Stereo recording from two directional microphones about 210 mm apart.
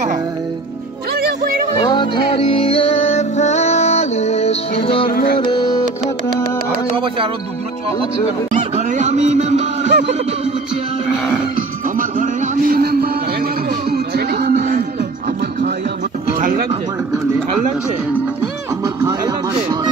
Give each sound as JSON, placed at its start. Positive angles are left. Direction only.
{"t": 1.1, "sound": "music", "side_deg": -50}
{"t": 1.8, "sound": "music", "side_deg": 20}
{"t": 5.0, "sound": "music", "side_deg": 45}
{"t": 5.4, "sound": "music", "side_deg": 20}
{"t": 8.5, "sound": "music", "side_deg": -35}
{"t": 12.0, "sound": "a sound", "side_deg": -40}
{"t": 14.6, "sound": "music", "side_deg": -35}
{"t": 15.0, "sound": "music", "side_deg": -45}
{"t": 16.3, "sound": "a sound", "side_deg": -40}
{"t": 18.9, "sound": "music", "side_deg": -15}